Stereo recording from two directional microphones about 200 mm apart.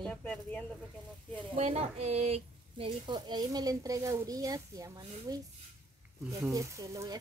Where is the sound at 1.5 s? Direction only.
30° right (ahead or behind).